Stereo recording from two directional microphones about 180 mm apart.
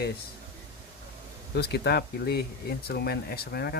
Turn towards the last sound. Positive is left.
turn(degrees=60)  # may be behind; listen again after turning